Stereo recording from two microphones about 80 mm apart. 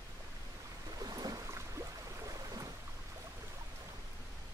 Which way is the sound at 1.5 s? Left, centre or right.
Right.